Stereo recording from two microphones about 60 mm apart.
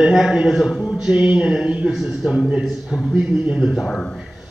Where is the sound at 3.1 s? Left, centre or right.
Centre.